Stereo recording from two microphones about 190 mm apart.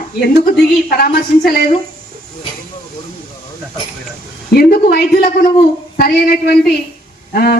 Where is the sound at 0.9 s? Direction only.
50° left (ahead or behind).